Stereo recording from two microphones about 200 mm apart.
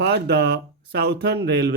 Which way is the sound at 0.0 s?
55° right (ahead or behind).